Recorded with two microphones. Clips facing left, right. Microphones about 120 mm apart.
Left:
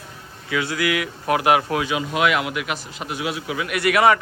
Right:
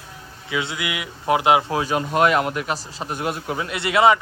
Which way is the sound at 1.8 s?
40° right (ahead or behind).